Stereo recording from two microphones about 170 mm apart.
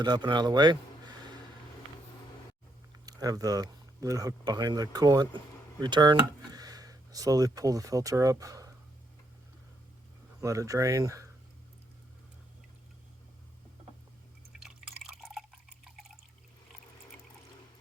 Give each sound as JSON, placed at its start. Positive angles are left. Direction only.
{"t": 0.0, "sound": "a man's voice", "side_deg": -25}
{"t": 3.1, "sound": "speech", "side_deg": -20}
{"t": 10.4, "sound": "speech", "side_deg": -20}
{"t": 14.6, "sound": "drip", "side_deg": -5}